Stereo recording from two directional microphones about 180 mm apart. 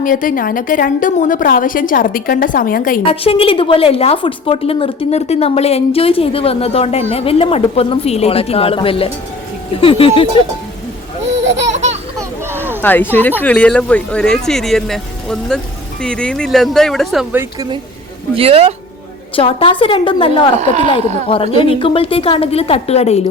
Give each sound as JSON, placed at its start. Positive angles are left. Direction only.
{"t": 0.0, "sound": "a woman's voice", "side_deg": 50}
{"t": 3.0, "sound": "a woman's voice", "side_deg": 30}
{"t": 11.3, "sound": "laughter", "side_deg": -80}
{"t": 11.7, "sound": "laughter", "side_deg": -40}
{"t": 12.5, "sound": "a sound", "side_deg": -10}
{"t": 12.8, "sound": "speech", "side_deg": 10}
{"t": 18.3, "sound": "speech", "side_deg": -30}
{"t": 19.4, "sound": "a woman's voice", "side_deg": 30}
{"t": 20.6, "sound": "speech", "side_deg": -40}
{"t": 21.2, "sound": "a woman's voice", "side_deg": 30}